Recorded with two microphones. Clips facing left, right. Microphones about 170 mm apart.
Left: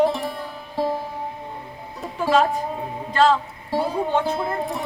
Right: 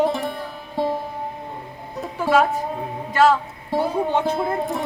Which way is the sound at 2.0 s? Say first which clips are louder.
Right 1 dB; centre (ahead or behind).